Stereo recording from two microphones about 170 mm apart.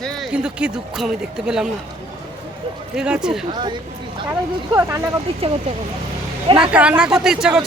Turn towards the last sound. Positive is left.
turn(degrees=-5)  # may be behind; listen again after turning